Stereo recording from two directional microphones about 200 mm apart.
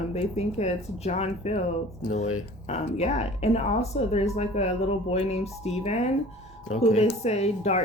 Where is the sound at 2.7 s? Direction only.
35° left (ahead or behind).